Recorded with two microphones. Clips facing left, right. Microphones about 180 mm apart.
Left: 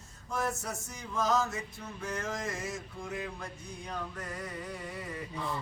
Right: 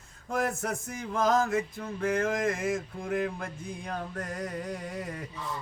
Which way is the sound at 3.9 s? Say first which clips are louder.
Right 3 dB; 45° right (ahead or behind).